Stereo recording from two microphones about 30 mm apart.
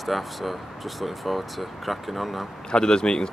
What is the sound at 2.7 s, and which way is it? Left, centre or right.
Speech, left.